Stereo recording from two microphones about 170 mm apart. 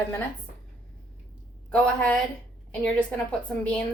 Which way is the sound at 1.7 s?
5° left (ahead or behind).